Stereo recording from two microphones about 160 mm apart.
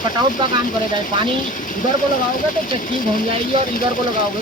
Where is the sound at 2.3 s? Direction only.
60° left (ahead or behind).